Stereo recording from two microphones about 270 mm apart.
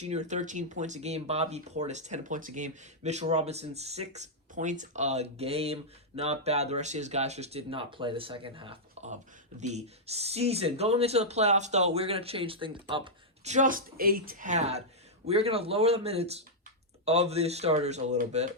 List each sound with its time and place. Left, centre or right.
0.0 s speech: right